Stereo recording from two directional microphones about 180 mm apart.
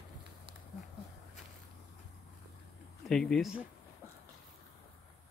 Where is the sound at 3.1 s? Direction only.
5° left (ahead or behind).